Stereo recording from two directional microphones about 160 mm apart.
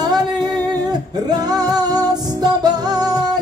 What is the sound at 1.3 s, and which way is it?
Music, 25° right (ahead or behind).